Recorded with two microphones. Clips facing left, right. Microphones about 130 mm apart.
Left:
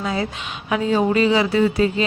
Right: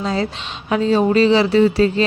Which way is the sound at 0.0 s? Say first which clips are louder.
Right 3 dB; 30° right (ahead or behind).